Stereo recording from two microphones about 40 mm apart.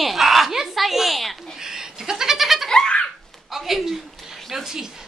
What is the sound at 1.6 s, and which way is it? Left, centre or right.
Goat, centre.